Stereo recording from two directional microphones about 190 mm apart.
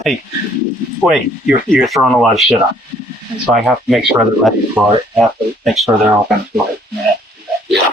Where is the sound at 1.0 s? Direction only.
Centre (ahead or behind).